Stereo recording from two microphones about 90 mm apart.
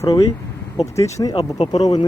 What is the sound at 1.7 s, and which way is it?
Speech, 50° left (ahead or behind).